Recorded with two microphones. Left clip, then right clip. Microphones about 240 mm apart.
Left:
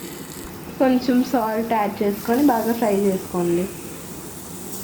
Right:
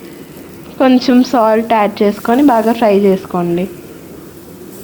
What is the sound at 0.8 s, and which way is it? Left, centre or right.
A woman's voice, right.